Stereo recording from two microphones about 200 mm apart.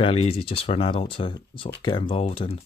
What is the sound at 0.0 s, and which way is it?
Speech, 30° left (ahead or behind).